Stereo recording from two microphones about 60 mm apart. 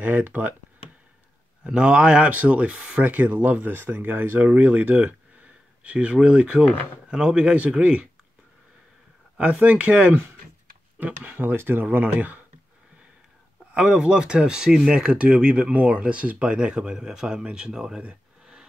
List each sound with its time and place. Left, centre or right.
0.0 s speech: right
1.6 s speech: centre
3.0 s speech: right
9.4 s speech: right
13.7 s speech: centre